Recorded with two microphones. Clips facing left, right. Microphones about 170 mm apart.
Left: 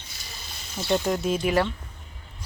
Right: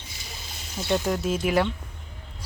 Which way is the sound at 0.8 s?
Centre (ahead or behind).